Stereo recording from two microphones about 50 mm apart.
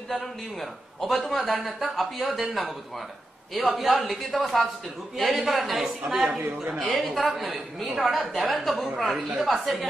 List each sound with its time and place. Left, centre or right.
0.1 s a man's voice: centre
6.6 s a woman's voice: right
7.0 s a man's voice: centre